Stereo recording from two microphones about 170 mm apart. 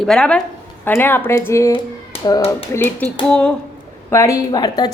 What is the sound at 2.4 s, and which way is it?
Speech, 15° left (ahead or behind).